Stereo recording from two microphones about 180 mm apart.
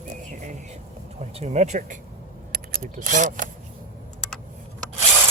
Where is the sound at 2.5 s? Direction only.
50° right (ahead or behind).